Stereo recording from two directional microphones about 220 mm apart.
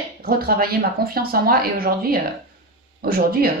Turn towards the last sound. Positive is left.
turn(degrees=-45)  # may be behind; listen again after turning